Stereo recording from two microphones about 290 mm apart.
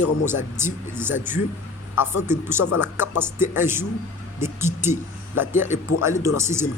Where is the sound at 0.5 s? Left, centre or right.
Centre.